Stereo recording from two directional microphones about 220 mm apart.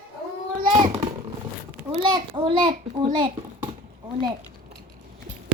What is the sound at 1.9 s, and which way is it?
A child's voice, 20° right (ahead or behind).